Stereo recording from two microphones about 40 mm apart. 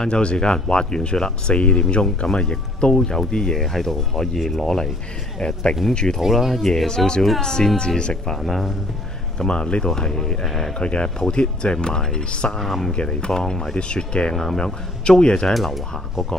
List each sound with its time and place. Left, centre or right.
0.0 s speech: left
3.5 s speech: centre
6.2 s speech: centre
6.6 s speech: centre
8.4 s speech: centre
9.4 s speech: left
10.4 s speech: centre
10.7 s speech: left
12.5 s speech: centre
12.9 s speech: left
14.3 s speech: centre
14.6 s speech: left
15.5 s speech: centre